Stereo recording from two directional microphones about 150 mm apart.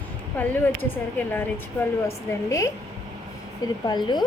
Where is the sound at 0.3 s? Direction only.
15° left (ahead or behind).